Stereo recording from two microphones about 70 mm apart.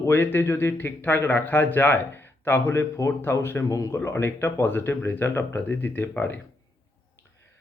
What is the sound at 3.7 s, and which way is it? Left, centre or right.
Speech, left.